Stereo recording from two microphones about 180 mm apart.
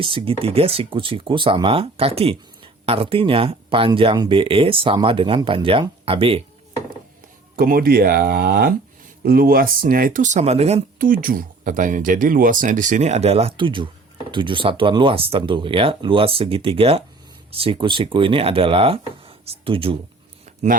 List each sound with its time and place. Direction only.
0.0 s speech: 30° right (ahead or behind)
7.5 s speech: 55° right (ahead or behind); by 10.8 s 35° right (ahead or behind)
10.9 s speech: 50° right (ahead or behind); by 20.0 s 30° right (ahead or behind)
20.4 s a sound: 40° right (ahead or behind)